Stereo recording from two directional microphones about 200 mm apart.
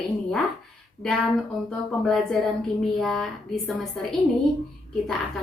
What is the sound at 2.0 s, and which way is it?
A woman's voice, centre (ahead or behind).